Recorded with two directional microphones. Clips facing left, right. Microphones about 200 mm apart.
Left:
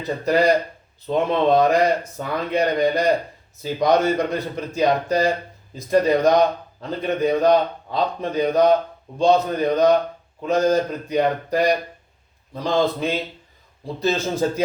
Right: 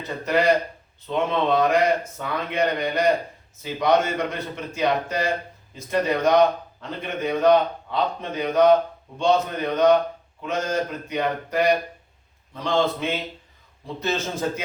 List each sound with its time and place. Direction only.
0.3 s speech: 35° left (ahead or behind)